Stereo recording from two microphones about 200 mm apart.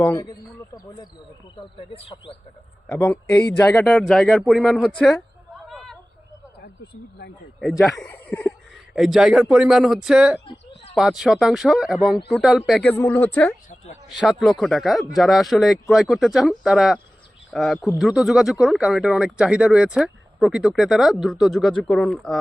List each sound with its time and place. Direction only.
0.0 s speech: 15° left (ahead or behind)
1.7 s cricket: 25° left (ahead or behind)
2.8 s a man's voice: 5° left (ahead or behind)
7.6 s speech: centre (ahead or behind)
10.4 s a sound: 30° left (ahead or behind)
10.9 s speech: centre (ahead or behind)
13.7 s a sound: 35° left (ahead or behind)
14.1 s speech: centre (ahead or behind)